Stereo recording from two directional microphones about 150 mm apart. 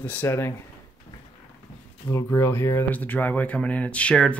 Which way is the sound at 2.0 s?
20° left (ahead or behind).